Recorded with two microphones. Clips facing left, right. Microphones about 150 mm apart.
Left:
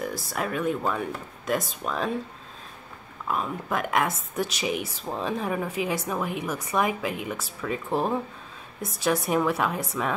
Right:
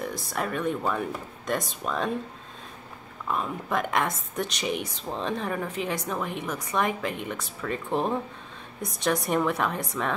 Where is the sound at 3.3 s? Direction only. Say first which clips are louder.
Even; 5° left (ahead or behind).